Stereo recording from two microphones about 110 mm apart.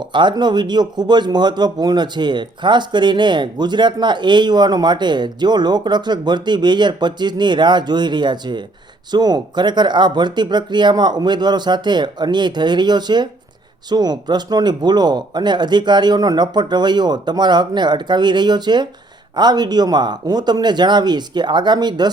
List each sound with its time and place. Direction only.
0.0 s speech: 45° right (ahead or behind)